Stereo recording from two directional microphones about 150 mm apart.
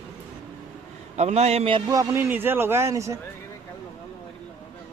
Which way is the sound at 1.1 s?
45° right (ahead or behind).